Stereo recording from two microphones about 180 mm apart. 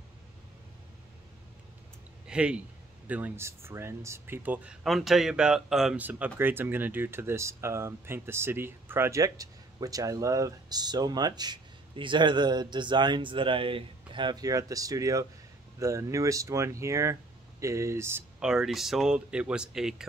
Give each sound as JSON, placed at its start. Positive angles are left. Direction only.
{"t": 2.2, "sound": "speech", "side_deg": -5}